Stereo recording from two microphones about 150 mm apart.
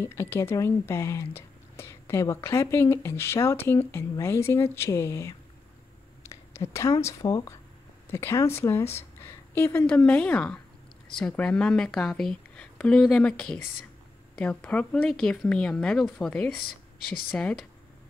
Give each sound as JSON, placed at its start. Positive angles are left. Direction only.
{"t": 0.0, "sound": "a woman's voice", "side_deg": 15}